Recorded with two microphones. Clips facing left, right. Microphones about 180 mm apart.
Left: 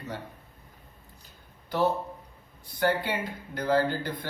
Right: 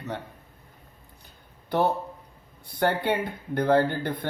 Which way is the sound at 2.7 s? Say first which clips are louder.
Right 3 dB; 60° right (ahead or behind).